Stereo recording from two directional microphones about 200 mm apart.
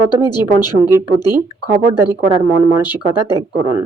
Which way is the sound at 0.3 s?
20° left (ahead or behind).